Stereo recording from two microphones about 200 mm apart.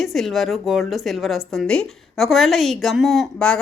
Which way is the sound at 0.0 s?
Centre (ahead or behind).